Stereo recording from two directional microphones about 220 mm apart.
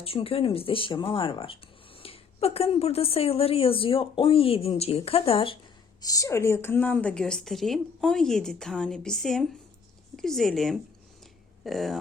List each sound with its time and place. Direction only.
0.0 s a woman's voice: 25° left (ahead or behind); by 11.9 s centre (ahead or behind)